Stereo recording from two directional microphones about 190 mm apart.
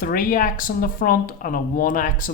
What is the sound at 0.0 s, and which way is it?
Speech, 45° left (ahead or behind).